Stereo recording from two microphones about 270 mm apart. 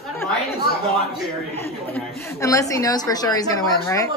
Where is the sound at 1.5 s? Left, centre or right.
Centre.